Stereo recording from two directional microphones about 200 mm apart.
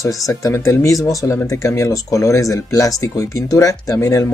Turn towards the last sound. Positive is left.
turn(degrees=15)  # may be behind; listen again after turning